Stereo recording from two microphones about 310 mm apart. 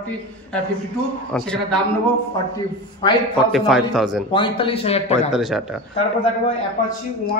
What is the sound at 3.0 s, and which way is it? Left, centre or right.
Speech, centre.